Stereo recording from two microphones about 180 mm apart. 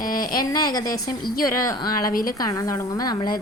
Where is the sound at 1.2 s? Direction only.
55° left (ahead or behind).